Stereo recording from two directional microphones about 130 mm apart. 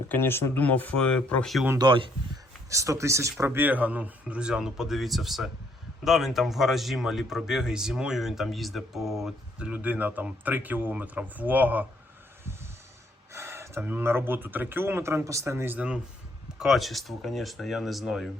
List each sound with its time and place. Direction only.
0.1 s speech: 15° left (ahead or behind)
1.8 s speech: 40° right (ahead or behind)
2.6 s speech: 25° right (ahead or behind)
13.3 s speech: 20° right (ahead or behind); by 18.3 s centre (ahead or behind)